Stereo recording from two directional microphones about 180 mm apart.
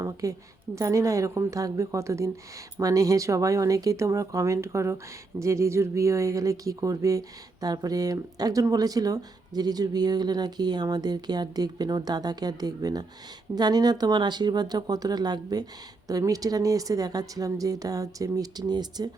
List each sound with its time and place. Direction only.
0.0 s a woman's voice: 20° right (ahead or behind)